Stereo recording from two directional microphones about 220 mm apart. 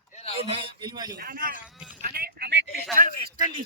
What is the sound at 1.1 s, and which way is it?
Speech, 40° right (ahead or behind).